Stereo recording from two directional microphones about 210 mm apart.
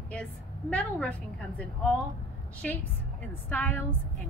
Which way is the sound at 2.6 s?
5° left (ahead or behind).